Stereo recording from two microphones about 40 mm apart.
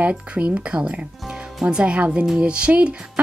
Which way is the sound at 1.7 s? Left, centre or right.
Right.